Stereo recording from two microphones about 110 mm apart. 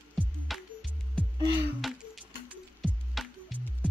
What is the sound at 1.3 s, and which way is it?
Music, 40° right (ahead or behind).